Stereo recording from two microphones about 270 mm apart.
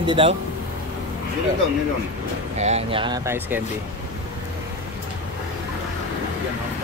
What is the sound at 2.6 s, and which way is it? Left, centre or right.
Speech, right.